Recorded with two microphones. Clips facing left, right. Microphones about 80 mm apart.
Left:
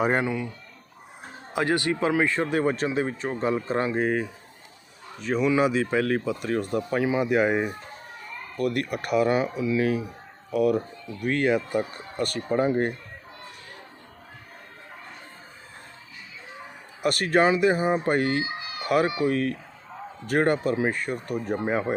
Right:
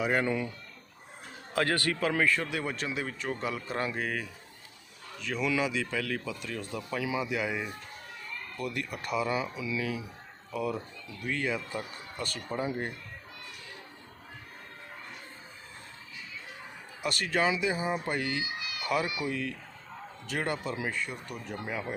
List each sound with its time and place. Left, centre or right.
0.3 s speech: centre
1.5 s speech: centre; by 10.1 s left
10.5 s speech: left
11.8 s speech: left
12.1 s speech: left
17.0 s speech: left
19.3 s speech: left